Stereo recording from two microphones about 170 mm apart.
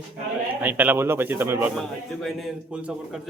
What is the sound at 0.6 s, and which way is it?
Speech, 10° right (ahead or behind).